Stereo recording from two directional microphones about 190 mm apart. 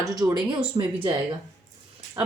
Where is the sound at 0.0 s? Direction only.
20° right (ahead or behind).